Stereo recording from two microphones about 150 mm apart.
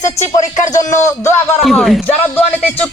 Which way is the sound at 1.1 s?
15° left (ahead or behind).